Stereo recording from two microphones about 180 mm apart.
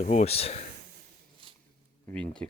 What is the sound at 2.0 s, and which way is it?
Speech, 5° left (ahead or behind).